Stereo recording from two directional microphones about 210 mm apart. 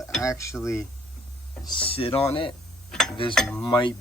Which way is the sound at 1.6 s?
25° left (ahead or behind).